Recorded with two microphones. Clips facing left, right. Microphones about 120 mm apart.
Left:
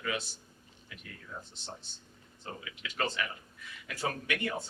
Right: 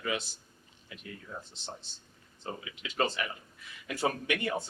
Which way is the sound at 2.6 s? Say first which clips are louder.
Right 4 dB; 25° right (ahead or behind).